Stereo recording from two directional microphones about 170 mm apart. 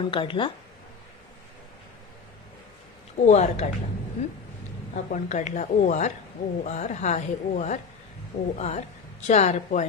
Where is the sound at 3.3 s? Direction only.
40° left (ahead or behind).